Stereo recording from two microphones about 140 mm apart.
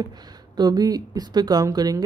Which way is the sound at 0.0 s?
30° right (ahead or behind).